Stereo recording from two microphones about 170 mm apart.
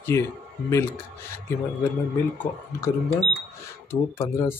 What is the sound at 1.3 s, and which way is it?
Speech, 10° left (ahead or behind).